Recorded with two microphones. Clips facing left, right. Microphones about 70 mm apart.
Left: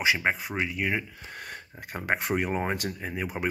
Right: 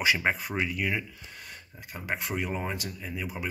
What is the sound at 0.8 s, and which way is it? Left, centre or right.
Speech, left.